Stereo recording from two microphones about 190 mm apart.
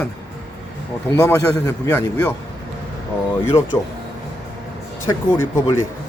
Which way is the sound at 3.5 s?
15° left (ahead or behind).